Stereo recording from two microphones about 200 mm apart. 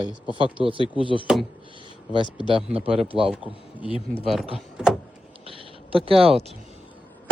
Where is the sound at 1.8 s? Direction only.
25° right (ahead or behind).